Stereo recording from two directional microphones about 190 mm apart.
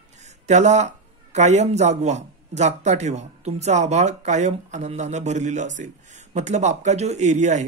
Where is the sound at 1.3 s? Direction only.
35° right (ahead or behind).